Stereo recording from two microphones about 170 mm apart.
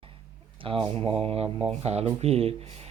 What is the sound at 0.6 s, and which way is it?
Speech, 30° right (ahead or behind).